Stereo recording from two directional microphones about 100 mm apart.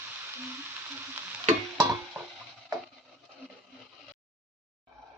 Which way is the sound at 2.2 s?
20° right (ahead or behind).